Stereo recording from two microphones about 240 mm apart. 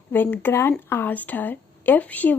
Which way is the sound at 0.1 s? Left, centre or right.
Centre.